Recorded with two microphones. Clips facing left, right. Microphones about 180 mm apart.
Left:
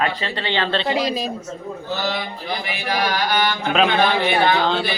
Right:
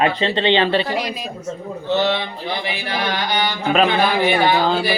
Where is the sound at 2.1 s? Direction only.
30° right (ahead or behind).